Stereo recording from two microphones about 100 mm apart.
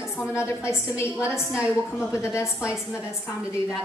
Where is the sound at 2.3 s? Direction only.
25° left (ahead or behind).